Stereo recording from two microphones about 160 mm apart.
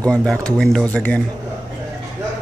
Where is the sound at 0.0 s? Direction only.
5° left (ahead or behind).